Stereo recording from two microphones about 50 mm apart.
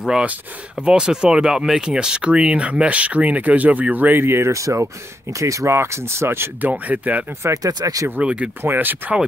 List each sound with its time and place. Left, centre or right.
0.7 s speech: centre; by 4.2 s right
4.2 s speech: right
4.5 s speech: right
6.9 s speech: right
7.4 s speech: right
8.2 s speech: right
8.6 s speech: right